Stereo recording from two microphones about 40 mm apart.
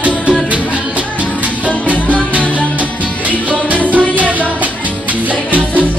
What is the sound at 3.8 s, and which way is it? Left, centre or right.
Music, right.